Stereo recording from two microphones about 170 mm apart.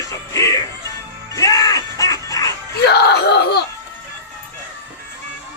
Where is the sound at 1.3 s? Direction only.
20° left (ahead or behind).